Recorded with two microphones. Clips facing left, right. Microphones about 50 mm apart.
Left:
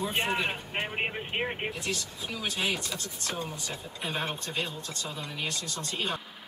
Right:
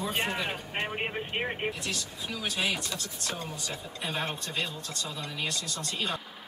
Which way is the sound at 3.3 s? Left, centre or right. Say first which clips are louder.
Left 1 dB; centre.